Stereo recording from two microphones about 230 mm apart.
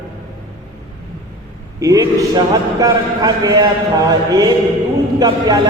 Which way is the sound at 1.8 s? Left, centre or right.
Centre.